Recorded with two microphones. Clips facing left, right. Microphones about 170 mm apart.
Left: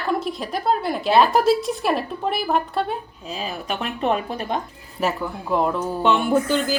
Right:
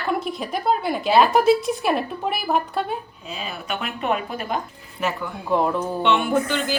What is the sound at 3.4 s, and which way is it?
Speech, 35° left (ahead or behind).